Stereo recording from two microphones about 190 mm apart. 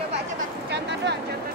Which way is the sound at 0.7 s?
65° right (ahead or behind).